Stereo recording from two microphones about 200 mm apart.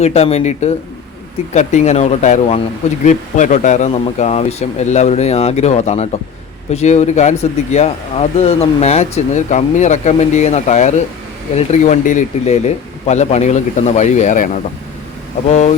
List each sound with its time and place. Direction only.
0.0 s speech: 30° left (ahead or behind)
15.4 s speech: 35° left (ahead or behind)